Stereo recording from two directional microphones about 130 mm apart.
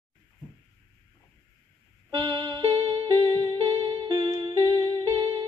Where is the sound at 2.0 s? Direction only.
40° right (ahead or behind).